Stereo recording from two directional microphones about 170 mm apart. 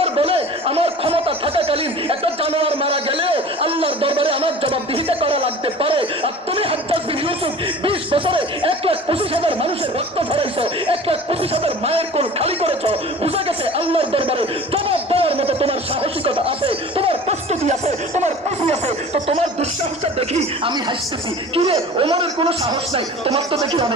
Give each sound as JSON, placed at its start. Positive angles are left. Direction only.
{"t": 0.0, "sound": "speech", "side_deg": -35}
{"t": 7.8, "sound": "a sound", "side_deg": -30}
{"t": 10.1, "sound": "laughter", "side_deg": -35}
{"t": 20.2, "sound": "a man's voice", "side_deg": -35}